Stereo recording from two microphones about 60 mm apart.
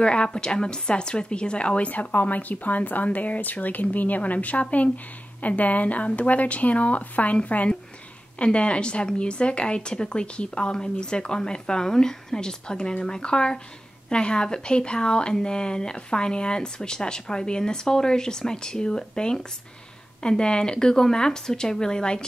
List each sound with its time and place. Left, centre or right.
0.0 s a woman's voice: centre